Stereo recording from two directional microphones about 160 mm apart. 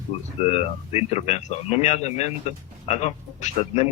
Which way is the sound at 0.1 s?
35° left (ahead or behind).